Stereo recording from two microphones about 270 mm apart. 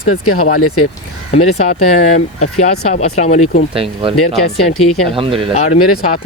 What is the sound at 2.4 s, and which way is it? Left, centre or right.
Speech, left.